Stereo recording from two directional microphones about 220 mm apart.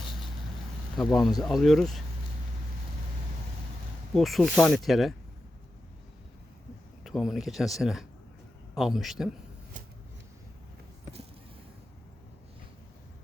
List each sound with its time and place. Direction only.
0.9 s speech: centre (ahead or behind)
4.1 s speech: centre (ahead or behind)
7.0 s speech: centre (ahead or behind)